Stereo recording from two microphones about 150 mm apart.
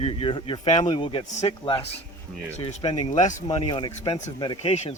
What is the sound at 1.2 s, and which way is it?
Speech, 50° left (ahead or behind).